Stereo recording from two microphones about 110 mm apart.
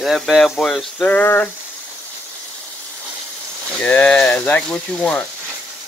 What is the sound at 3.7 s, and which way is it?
Speech, 10° left (ahead or behind).